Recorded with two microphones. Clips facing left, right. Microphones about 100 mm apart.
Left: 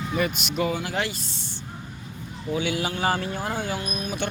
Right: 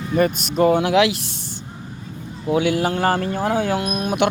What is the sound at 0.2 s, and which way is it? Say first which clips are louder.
Speech: right 9 dB; 45° right (ahead or behind).